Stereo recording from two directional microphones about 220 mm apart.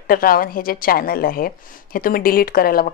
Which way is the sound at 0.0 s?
40° left (ahead or behind).